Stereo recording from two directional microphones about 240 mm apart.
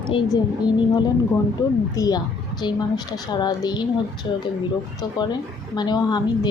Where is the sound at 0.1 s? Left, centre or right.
Centre.